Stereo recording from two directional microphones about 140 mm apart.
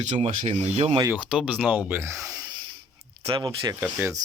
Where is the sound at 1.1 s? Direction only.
5° right (ahead or behind).